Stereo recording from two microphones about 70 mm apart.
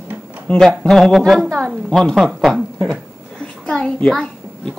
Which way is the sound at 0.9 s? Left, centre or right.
Centre.